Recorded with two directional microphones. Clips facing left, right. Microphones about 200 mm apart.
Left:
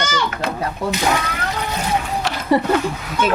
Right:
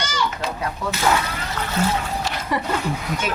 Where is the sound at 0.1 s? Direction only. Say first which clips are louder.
Left 3 dB; 60° left (ahead or behind).